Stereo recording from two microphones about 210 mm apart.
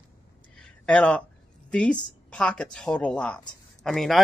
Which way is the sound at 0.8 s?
5° left (ahead or behind).